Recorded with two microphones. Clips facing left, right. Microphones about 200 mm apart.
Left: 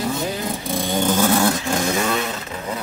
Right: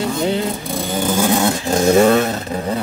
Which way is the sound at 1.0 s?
10° right (ahead or behind).